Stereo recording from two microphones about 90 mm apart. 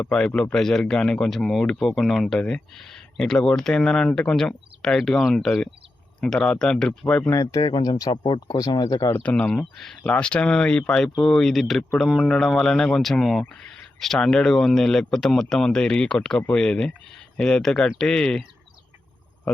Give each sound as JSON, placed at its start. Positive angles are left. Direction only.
{"t": 0.0, "sound": "speech", "side_deg": 10}
{"t": 7.5, "sound": "speech", "side_deg": 50}
{"t": 8.1, "sound": "speech", "side_deg": 65}
{"t": 8.4, "sound": "speech", "side_deg": 40}
{"t": 9.2, "sound": "speech", "side_deg": 10}